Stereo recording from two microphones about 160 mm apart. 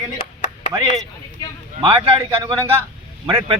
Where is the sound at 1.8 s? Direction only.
30° right (ahead or behind).